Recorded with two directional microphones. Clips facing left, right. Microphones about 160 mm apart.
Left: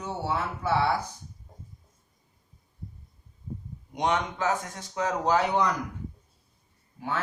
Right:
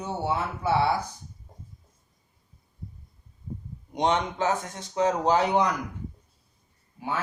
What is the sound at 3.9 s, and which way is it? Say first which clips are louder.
Speech: right 2 dB; 25° right (ahead or behind).